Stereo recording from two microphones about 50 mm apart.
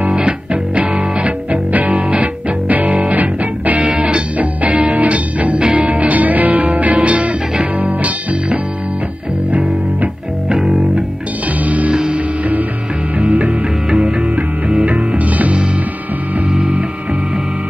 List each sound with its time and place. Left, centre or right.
0.7 s music: right
2.0 s music: right
10.5 s music: centre
11.6 s music: right
11.9 s music: centre
13.2 s music: right
13.8 s music: centre
14.3 s music: right
16.4 s music: centre